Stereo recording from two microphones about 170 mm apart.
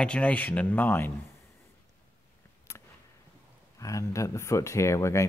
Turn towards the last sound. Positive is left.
turn(degrees=15)  # may be behind; listen again after turning